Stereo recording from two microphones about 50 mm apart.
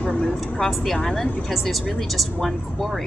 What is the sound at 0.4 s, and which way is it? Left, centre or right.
A woman's voice, centre.